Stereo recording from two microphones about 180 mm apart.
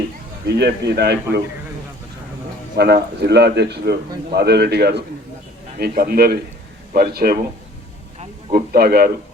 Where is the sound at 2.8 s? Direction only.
65° right (ahead or behind).